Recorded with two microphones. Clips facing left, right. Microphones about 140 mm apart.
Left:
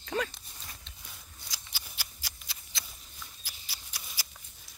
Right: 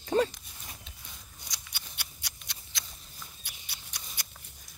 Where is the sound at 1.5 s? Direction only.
5° left (ahead or behind).